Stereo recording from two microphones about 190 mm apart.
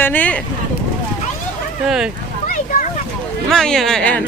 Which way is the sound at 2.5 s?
45° left (ahead or behind).